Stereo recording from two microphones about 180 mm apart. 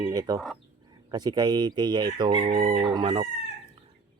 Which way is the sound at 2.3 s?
45° right (ahead or behind).